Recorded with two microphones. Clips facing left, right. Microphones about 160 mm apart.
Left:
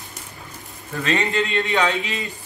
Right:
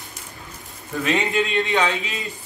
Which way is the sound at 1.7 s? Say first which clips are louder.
Left 1 dB; centre (ahead or behind).